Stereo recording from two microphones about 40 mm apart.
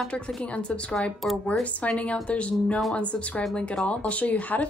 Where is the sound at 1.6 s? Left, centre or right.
Left.